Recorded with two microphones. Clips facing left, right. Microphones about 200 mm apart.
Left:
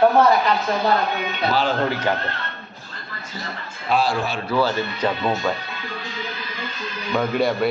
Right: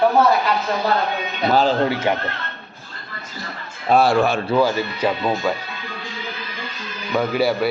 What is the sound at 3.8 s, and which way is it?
Speech, 50° right (ahead or behind).